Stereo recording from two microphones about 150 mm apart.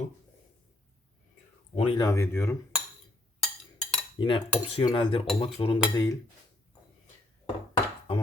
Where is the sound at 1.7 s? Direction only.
40° left (ahead or behind).